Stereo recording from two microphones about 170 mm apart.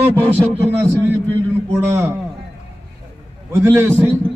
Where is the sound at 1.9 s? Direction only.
15° right (ahead or behind).